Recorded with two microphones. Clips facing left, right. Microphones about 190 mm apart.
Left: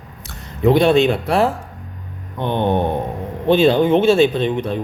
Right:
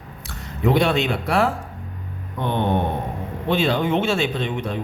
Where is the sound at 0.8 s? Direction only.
25° left (ahead or behind).